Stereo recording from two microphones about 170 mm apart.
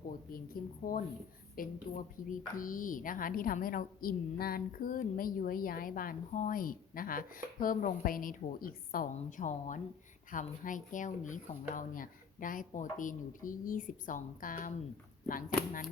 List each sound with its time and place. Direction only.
0.1 s speech: 60° left (ahead or behind)